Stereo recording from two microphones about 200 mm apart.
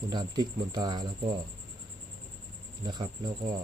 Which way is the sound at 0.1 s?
20° right (ahead or behind).